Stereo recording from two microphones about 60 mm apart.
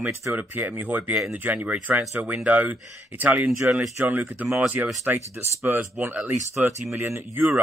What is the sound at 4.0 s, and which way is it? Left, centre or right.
Speech, right.